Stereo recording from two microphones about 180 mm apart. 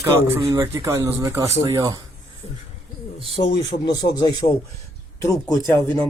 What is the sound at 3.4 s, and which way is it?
Speech, 25° left (ahead or behind).